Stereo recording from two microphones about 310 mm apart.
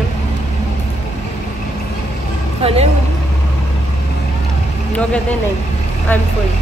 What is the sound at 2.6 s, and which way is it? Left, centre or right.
Speech, centre.